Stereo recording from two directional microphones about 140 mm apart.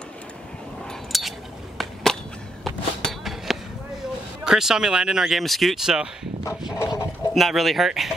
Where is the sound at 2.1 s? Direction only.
5° left (ahead or behind).